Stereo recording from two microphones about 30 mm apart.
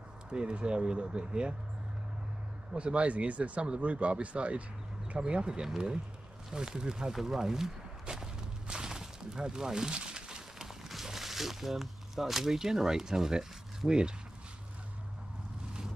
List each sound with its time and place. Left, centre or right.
0.3 s speech: right
2.7 s speech: right
5.2 s speech: right
6.5 s speech: right
7.1 s speech: centre
8.2 s a sound: right
10.6 s a sound: centre
11.1 s speech: centre
13.8 s speech: right